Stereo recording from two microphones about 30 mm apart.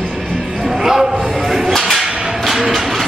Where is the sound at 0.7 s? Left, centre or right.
Centre.